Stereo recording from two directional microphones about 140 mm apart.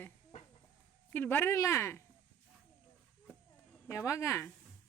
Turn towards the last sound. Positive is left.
turn(degrees=15)  # may be behind; listen again after turning